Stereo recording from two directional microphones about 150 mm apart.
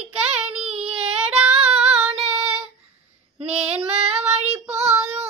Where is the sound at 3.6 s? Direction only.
45° right (ahead or behind).